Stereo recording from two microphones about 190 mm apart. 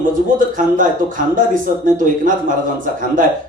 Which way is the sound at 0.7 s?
45° right (ahead or behind).